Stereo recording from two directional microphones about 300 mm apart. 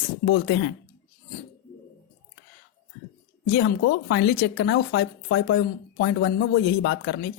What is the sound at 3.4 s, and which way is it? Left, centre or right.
Speech, left.